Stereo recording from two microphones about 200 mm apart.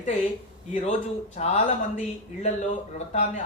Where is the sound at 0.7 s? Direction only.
40° left (ahead or behind).